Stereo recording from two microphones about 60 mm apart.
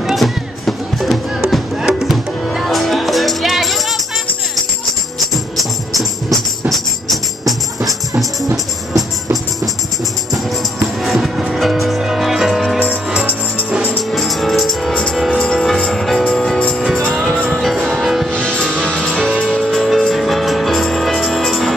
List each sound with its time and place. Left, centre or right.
0.0 s music: centre
5.6 s music: centre
11.0 s music: centre
12.7 s music: right
14.1 s music: centre
18.9 s music: centre